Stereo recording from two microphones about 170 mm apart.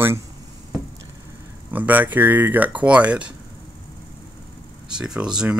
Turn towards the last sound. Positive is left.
turn(degrees=-5)  # may be behind; listen again after turning